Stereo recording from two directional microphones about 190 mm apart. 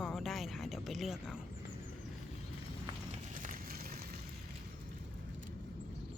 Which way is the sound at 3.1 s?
40° right (ahead or behind).